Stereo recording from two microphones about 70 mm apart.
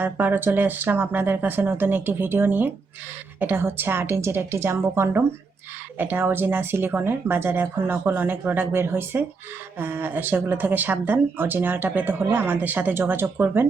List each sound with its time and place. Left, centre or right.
0.0 s speech: right
6.0 s speech: right